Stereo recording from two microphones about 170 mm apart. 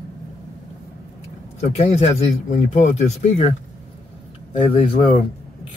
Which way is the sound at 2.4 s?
45° left (ahead or behind).